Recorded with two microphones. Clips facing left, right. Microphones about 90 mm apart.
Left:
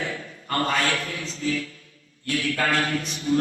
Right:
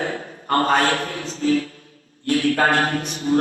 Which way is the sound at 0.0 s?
40° right (ahead or behind).